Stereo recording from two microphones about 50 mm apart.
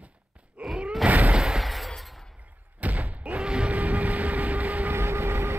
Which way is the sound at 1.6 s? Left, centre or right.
Centre.